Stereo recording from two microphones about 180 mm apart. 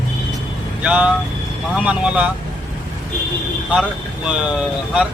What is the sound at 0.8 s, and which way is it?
A man's voice, 5° right (ahead or behind).